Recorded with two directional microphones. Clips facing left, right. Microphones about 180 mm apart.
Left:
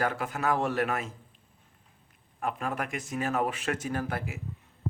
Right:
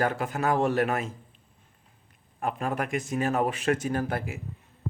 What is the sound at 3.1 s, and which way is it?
Speech, 35° right (ahead or behind).